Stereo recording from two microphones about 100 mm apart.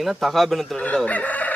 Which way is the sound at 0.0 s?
Centre (ahead or behind).